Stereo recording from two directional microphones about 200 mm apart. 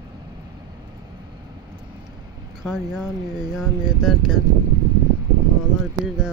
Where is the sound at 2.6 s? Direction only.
Centre (ahead or behind).